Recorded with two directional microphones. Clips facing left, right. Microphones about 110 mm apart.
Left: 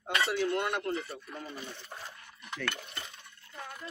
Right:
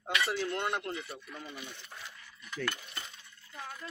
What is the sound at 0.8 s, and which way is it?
Speech, 40° left (ahead or behind).